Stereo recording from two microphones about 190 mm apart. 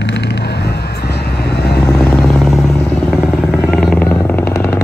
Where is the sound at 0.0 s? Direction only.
65° left (ahead or behind).